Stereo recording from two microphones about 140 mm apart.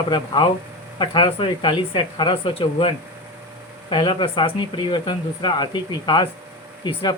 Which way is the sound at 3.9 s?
35° left (ahead or behind).